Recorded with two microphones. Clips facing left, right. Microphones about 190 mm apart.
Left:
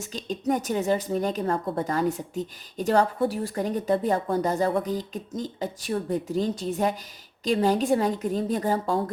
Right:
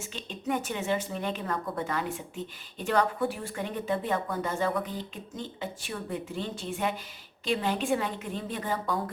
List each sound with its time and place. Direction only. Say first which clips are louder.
0.0 s a woman's voice: left 7 dB; 40° left (ahead or behind)